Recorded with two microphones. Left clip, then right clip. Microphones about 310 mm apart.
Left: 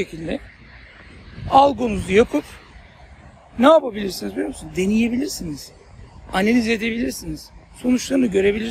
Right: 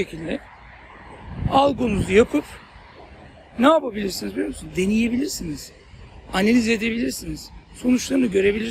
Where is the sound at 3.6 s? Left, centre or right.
Centre.